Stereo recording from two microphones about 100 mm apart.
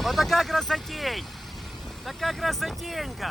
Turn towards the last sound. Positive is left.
turn(degrees=0)  # may be behind; listen again after turning